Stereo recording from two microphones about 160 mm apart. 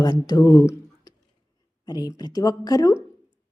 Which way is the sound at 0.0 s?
25° left (ahead or behind).